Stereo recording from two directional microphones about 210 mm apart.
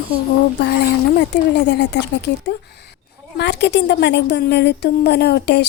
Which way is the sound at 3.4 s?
55° left (ahead or behind).